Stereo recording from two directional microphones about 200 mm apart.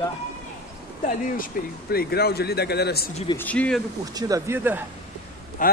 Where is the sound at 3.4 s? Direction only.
5° left (ahead or behind).